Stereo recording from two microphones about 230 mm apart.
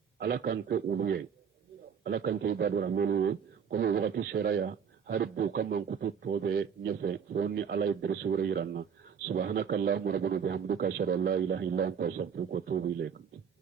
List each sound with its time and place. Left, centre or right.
0.2 s a man's voice: right